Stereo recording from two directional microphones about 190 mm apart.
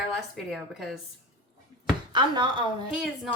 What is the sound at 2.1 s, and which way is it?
Speech, 25° right (ahead or behind).